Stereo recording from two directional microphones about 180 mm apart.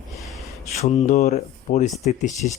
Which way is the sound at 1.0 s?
45° left (ahead or behind).